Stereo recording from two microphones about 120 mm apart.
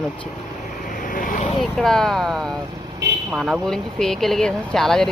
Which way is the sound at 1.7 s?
5° left (ahead or behind).